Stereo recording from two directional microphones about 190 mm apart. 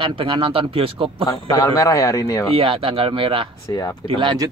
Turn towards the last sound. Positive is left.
turn(degrees=-25)  # may be behind; listen again after turning